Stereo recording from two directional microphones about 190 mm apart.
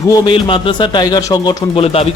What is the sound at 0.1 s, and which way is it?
Speech, 25° left (ahead or behind).